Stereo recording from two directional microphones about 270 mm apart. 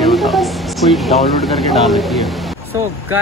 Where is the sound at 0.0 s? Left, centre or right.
Centre.